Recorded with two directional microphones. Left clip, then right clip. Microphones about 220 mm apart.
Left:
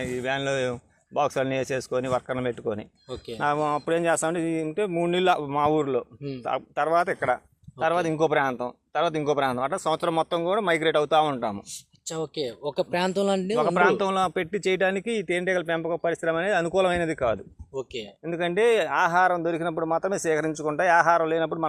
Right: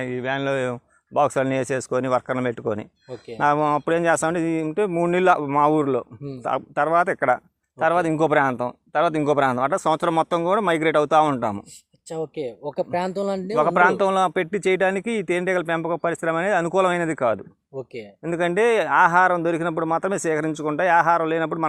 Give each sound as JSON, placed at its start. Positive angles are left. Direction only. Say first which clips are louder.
{"t": 0.0, "sound": "speech", "louder": "right 3 dB", "side_deg": -30}
{"t": 12.0, "sound": "speech", "louder": "right 2 dB", "side_deg": -10}
{"t": 13.6, "sound": "speech", "louder": "right 5 dB", "side_deg": -40}